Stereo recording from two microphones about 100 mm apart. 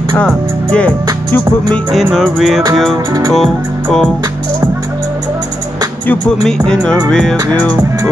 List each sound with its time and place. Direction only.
0.2 s speech: 10° left (ahead or behind)
2.1 s music: centre (ahead or behind)
3.1 s music: 40° right (ahead or behind)
6.4 s speech: 5° left (ahead or behind)
7.1 s music: 5° left (ahead or behind)